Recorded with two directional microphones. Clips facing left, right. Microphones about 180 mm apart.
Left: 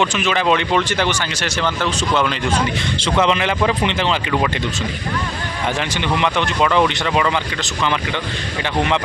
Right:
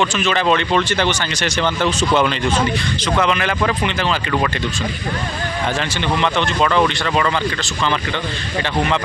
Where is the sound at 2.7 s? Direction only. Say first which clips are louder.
Even; 25° left (ahead or behind).